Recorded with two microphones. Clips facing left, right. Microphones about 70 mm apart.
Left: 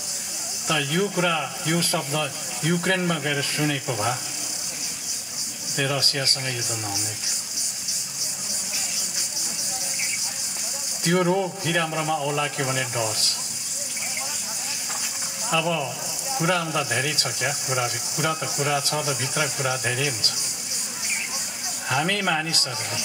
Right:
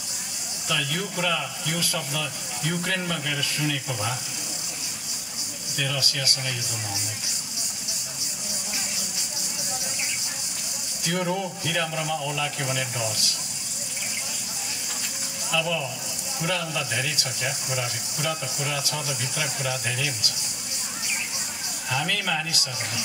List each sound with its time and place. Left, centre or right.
0.7 s speech: left
5.8 s speech: left
11.1 s speech: left
15.5 s speech: left
21.8 s speech: left